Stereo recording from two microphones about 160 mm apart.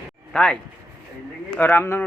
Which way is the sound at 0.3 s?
5° left (ahead or behind).